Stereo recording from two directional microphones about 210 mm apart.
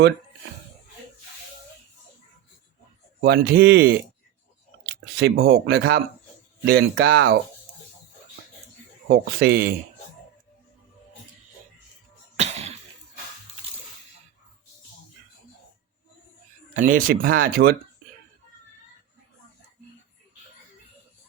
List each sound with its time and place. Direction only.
3.2 s speech: 45° right (ahead or behind)
5.1 s speech: 50° right (ahead or behind)
9.0 s speech: 50° right (ahead or behind)
12.4 s music: 30° right (ahead or behind)
16.7 s speech: 40° right (ahead or behind)